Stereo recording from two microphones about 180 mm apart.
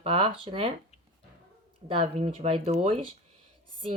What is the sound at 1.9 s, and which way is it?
A child's voice, 30° right (ahead or behind).